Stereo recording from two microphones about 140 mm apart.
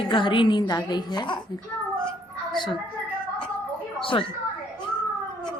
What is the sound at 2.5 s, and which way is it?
Speech, 35° left (ahead or behind).